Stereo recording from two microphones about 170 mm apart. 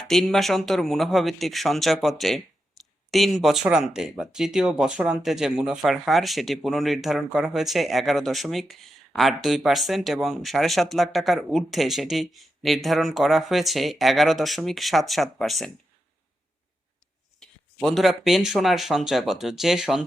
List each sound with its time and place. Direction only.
0.0 s speech: 5° left (ahead or behind)
17.4 s speech: 5° left (ahead or behind)